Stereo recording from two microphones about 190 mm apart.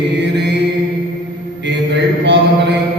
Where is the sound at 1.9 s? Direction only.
65° right (ahead or behind).